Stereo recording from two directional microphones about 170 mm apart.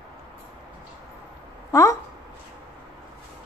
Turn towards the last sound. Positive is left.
turn(degrees=20)  # may be behind; listen again after turning